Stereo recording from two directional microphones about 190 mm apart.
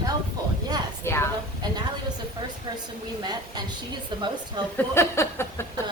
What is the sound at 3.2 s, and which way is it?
A woman's voice, 20° right (ahead or behind).